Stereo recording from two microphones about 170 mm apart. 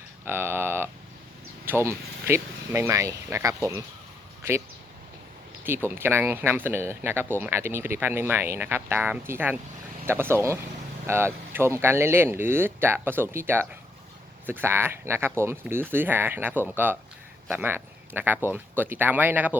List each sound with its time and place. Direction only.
0.3 s speech: 15° right (ahead or behind)
5.6 s speech: 15° right (ahead or behind)